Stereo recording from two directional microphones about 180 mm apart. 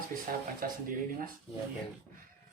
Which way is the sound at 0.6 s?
50° right (ahead or behind).